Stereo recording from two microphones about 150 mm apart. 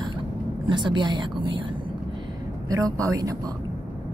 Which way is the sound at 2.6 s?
20° right (ahead or behind).